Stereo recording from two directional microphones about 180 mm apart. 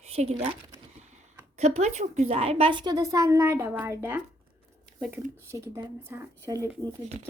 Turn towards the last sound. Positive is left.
turn(degrees=-15)  # may be behind; listen again after turning